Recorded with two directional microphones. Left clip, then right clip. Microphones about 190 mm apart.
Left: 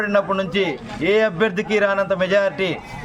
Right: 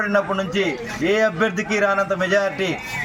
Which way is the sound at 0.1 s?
25° left (ahead or behind).